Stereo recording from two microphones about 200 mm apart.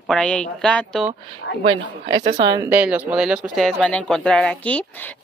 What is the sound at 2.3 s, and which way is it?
Speech, 20° right (ahead or behind).